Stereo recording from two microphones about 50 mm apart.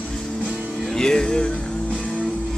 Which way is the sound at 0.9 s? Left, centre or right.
Centre.